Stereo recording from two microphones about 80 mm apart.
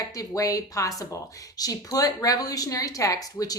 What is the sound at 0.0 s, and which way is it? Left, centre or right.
Speech, left.